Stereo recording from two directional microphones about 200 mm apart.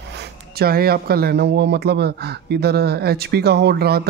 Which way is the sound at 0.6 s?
50° right (ahead or behind).